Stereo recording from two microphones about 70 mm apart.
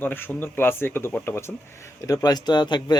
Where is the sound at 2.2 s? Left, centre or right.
Left.